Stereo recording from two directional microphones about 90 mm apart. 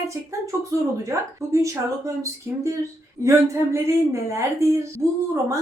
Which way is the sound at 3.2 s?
35° right (ahead or behind).